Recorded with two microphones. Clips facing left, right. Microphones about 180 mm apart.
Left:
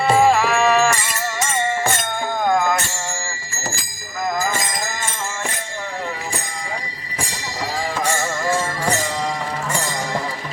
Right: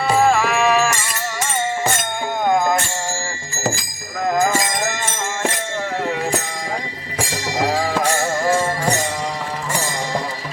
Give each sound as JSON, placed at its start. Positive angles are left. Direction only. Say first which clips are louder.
{"t": 0.1, "sound": "livestock", "louder": "left 1 dB", "side_deg": 0}
{"t": 2.5, "sound": "music", "louder": "right 1 dB", "side_deg": -15}
{"t": 7.6, "sound": "music", "louder": "right 5 dB", "side_deg": -90}